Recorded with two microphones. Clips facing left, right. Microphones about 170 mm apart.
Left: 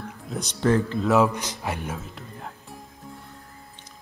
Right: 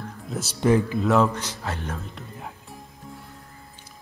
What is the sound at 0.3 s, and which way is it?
Speech, 5° right (ahead or behind).